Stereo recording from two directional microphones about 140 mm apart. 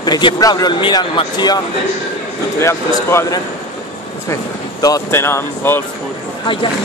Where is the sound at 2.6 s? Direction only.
20° left (ahead or behind).